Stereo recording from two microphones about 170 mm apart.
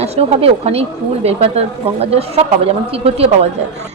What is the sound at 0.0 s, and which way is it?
A woman's voice, 35° right (ahead or behind).